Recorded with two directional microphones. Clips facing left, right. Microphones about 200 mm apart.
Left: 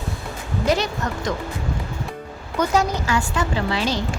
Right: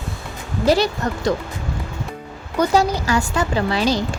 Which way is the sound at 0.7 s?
35° right (ahead or behind).